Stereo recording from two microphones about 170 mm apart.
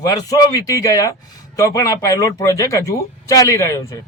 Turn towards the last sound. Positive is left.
turn(degrees=20)  # may be behind; listen again after turning